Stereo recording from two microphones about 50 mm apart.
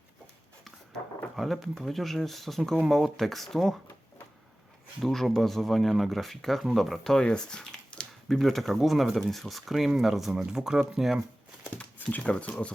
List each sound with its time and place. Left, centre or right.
1.4 s speech: centre
5.0 s speech: centre
12.2 s speech: left